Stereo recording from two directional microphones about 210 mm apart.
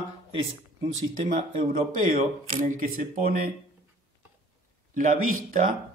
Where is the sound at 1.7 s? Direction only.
40° right (ahead or behind).